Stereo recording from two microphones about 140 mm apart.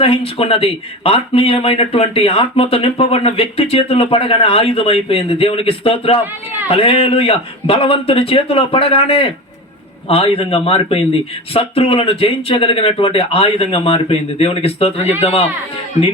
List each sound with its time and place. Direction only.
0.0 s speech: 45° left (ahead or behind)